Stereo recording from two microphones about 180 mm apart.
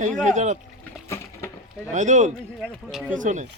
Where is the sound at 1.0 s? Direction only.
15° left (ahead or behind).